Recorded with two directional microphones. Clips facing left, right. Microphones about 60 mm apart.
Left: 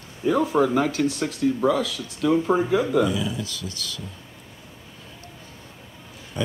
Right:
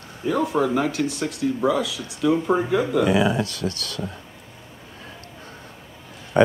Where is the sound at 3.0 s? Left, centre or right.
Right.